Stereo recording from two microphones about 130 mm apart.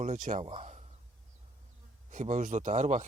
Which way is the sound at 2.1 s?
70° right (ahead or behind).